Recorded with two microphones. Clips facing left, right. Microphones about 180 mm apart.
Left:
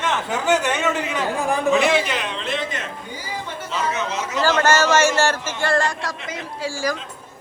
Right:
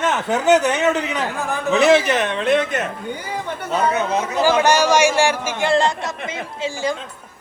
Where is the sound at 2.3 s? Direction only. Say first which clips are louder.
Right 8 dB; 60° right (ahead or behind).